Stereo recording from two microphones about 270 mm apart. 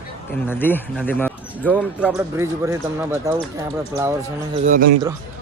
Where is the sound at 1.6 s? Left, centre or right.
Centre.